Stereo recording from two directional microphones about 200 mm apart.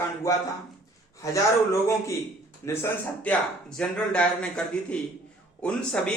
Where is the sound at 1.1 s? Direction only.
15° left (ahead or behind).